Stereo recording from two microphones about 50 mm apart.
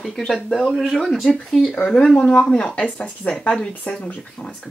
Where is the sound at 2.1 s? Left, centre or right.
Centre.